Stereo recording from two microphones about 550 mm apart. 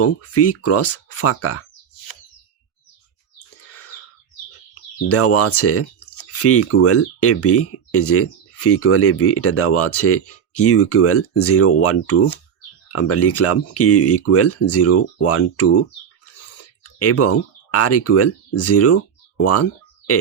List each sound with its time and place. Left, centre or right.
0.0 s speech: left
3.3 s bird: left
5.0 s speech: left
17.0 s speech: left